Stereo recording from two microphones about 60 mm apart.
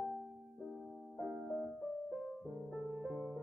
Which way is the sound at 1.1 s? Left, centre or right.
Centre.